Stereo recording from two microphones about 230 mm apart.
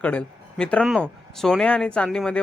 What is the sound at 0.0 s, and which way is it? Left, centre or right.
Speech, centre.